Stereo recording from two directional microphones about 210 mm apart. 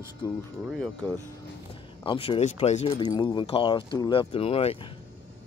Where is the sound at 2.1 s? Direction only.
25° left (ahead or behind).